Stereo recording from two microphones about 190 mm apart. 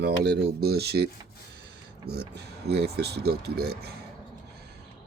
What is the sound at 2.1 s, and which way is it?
Speech, 60° right (ahead or behind).